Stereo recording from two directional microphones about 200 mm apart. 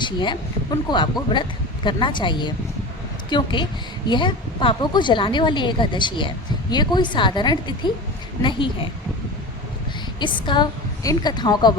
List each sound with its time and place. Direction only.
0.0 s a woman's voice: 20° left (ahead or behind)
10.2 s a woman's voice: 25° left (ahead or behind)